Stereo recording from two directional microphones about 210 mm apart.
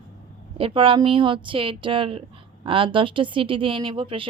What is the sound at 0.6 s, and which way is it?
Speech, 25° right (ahead or behind).